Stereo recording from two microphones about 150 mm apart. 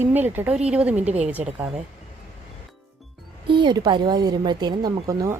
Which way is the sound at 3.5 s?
30° right (ahead or behind).